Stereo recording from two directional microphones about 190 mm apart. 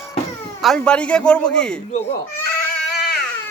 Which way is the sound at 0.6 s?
5° left (ahead or behind).